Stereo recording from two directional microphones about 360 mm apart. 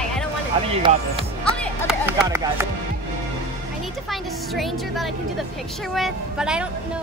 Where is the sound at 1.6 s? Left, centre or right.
Centre.